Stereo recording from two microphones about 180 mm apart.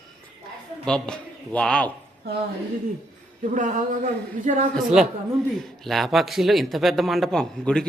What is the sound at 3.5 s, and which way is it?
Speech, 45° right (ahead or behind).